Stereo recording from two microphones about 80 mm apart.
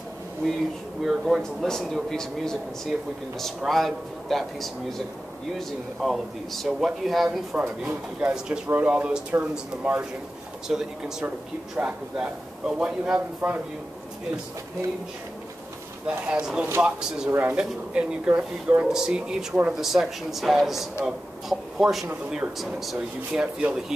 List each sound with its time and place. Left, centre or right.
1.0 s speech: centre
7.5 s speech: right
8.2 s a man's voice: centre
10.7 s a man's voice: centre
16.1 s a man's voice: centre
17.3 s speech: right
17.6 s a man's voice: centre
19.8 s a man's voice: centre